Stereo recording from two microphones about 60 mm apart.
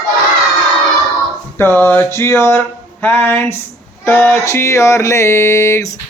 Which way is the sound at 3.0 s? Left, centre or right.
Left.